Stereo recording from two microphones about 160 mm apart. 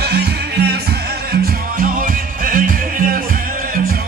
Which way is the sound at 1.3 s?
65° right (ahead or behind).